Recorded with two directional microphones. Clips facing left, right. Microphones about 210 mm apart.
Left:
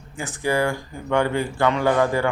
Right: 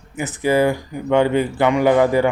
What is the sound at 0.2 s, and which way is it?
Speech, 20° right (ahead or behind).